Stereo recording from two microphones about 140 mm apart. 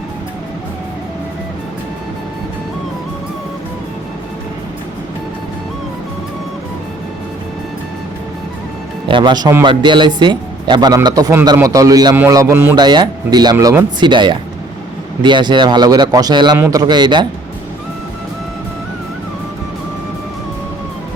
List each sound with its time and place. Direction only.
9.0 s a man's voice: 35° right (ahead or behind); by 12.7 s 20° right (ahead or behind)
12.7 s a man's voice: 30° right (ahead or behind)